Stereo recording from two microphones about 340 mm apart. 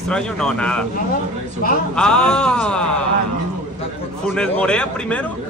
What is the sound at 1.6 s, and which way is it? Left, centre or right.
Speech, left.